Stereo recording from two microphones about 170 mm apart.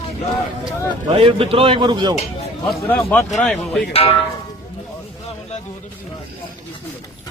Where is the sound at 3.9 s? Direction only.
35° left (ahead or behind).